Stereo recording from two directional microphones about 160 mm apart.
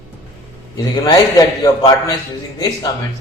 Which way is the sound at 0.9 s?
25° left (ahead or behind).